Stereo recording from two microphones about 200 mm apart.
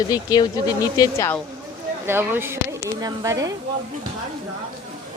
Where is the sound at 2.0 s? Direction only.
10° right (ahead or behind).